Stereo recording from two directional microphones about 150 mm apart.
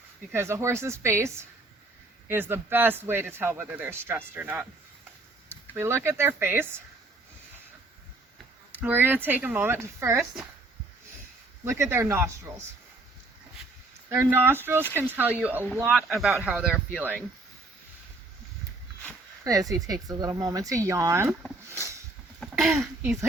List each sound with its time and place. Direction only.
0.3 s speech: 15° right (ahead or behind)
8.8 s speech: 15° right (ahead or behind)
11.6 s speech: 15° right (ahead or behind)
14.1 s speech: 15° right (ahead or behind)
19.5 s speech: 25° right (ahead or behind)
21.7 s vehicle: 20° right (ahead or behind)
22.4 s a sound: centre (ahead or behind)